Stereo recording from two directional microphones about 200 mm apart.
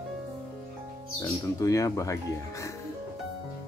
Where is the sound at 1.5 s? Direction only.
15° left (ahead or behind).